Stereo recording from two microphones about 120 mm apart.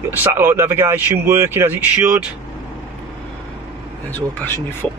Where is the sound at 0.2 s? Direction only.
20° right (ahead or behind).